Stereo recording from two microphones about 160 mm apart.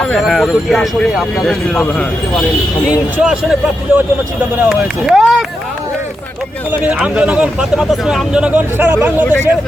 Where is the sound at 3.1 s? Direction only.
5° right (ahead or behind).